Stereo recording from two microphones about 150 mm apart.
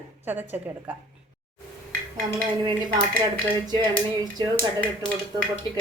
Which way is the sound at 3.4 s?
30° right (ahead or behind).